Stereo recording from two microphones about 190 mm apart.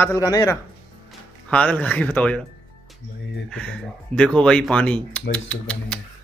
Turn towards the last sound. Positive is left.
turn(degrees=5)  # may be behind; listen again after turning